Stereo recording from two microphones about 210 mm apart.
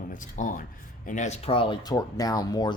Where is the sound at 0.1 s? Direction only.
40° left (ahead or behind).